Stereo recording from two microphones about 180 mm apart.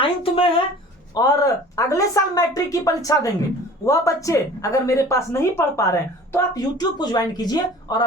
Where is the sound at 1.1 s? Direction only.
20° left (ahead or behind).